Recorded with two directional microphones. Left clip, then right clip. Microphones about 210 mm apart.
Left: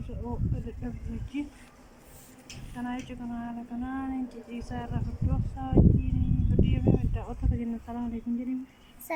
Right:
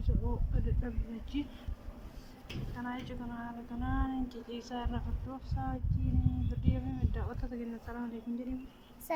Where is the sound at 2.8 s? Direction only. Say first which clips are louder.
Left 5 dB; 15° left (ahead or behind).